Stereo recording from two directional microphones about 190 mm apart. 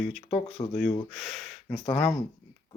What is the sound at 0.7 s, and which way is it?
Speech, 5° left (ahead or behind).